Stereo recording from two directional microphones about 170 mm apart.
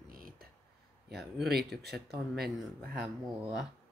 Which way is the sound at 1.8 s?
75° right (ahead or behind).